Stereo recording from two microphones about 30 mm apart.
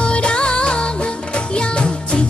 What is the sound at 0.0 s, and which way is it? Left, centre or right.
Music, left.